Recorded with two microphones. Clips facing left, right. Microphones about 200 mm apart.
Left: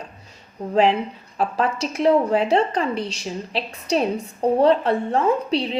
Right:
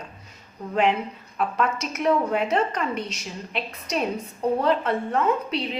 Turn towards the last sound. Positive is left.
turn(degrees=30)  # may be behind; listen again after turning